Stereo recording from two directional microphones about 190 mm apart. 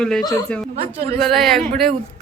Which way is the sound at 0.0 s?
5° left (ahead or behind).